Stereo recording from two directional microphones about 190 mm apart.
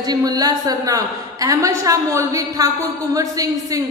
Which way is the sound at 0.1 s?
20° right (ahead or behind).